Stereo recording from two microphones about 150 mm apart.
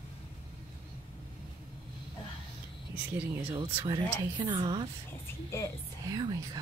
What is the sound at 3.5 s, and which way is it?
A woman's voice, 40° right (ahead or behind).